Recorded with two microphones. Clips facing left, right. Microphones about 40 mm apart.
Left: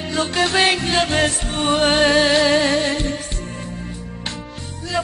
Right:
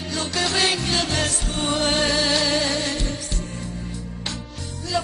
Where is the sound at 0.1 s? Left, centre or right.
Left.